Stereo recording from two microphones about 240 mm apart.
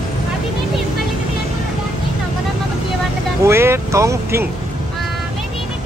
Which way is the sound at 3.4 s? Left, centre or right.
Centre.